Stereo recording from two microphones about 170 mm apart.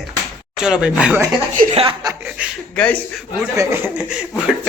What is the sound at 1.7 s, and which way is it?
Speech, 25° right (ahead or behind).